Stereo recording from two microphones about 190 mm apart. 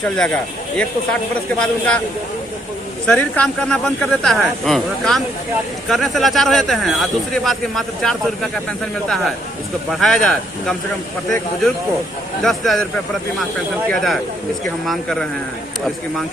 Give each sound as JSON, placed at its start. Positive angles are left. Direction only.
{"t": 0.0, "sound": "speech", "side_deg": 5}
{"t": 1.5, "sound": "speech", "side_deg": 5}
{"t": 3.1, "sound": "speech", "side_deg": 5}
{"t": 12.4, "sound": "speech", "side_deg": 0}
{"t": 13.9, "sound": "speech", "side_deg": 0}